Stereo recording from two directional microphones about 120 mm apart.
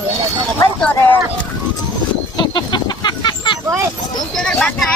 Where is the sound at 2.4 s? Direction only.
35° left (ahead or behind).